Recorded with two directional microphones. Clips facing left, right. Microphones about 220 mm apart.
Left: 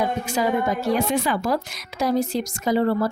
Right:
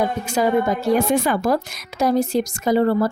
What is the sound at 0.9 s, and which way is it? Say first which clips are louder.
A woman's voice: right 4 dB; 45° right (ahead or behind).